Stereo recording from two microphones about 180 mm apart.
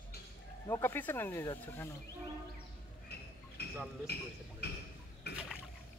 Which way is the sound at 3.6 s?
65° left (ahead or behind).